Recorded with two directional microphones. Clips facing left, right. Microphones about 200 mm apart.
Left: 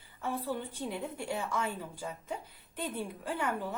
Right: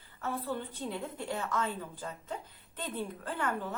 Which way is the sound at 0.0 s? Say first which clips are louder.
Left 1 dB; 15° left (ahead or behind).